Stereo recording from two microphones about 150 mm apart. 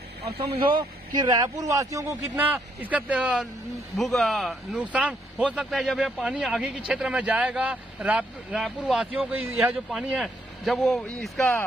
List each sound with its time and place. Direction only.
0.6 s speech: 35° right (ahead or behind)
2.3 s speech: 10° right (ahead or behind)